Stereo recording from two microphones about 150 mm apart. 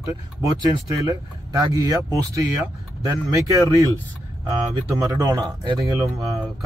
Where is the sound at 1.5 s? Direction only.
20° right (ahead or behind).